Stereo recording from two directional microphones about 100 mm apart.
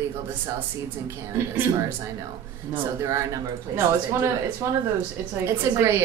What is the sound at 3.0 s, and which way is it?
A woman's voice, 30° right (ahead or behind).